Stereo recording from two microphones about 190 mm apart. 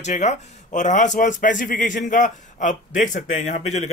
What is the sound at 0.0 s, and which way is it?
A man's voice, 40° left (ahead or behind).